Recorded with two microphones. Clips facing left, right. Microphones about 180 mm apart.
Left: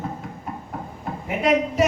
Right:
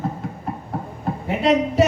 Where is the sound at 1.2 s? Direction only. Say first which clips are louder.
Right 2 dB; 30° right (ahead or behind).